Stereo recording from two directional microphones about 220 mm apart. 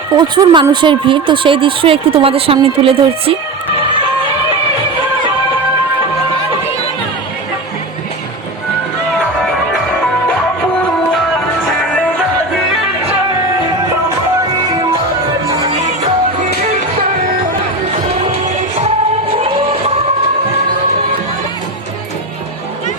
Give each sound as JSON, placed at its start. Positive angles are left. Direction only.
{"t": 0.1, "sound": "speech", "side_deg": -20}
{"t": 9.4, "sound": "music", "side_deg": 0}